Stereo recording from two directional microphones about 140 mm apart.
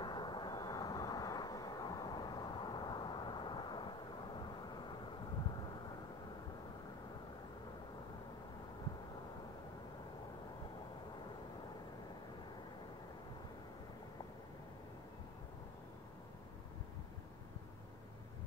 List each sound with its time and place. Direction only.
0.0 s vehicle: 30° left (ahead or behind)